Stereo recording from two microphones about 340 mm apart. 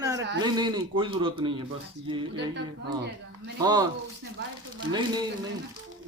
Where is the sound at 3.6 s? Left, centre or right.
Centre.